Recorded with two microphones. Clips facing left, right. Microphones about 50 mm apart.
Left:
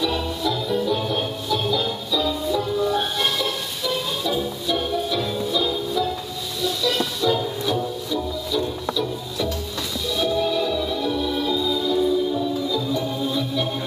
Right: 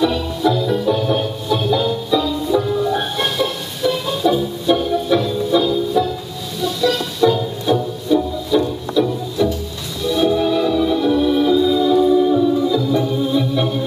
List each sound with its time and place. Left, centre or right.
0.0 s music: right
1.1 s music: centre
7.2 s music: right
11.1 s organ: right
12.9 s organ: centre